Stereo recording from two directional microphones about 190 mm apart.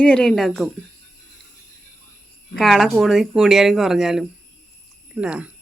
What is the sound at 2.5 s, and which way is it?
A woman's voice, centre (ahead or behind).